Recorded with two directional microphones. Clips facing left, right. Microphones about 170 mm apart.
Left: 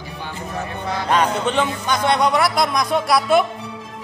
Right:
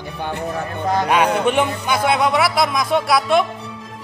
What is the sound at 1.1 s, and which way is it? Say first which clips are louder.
Speech: even; 10° right (ahead or behind).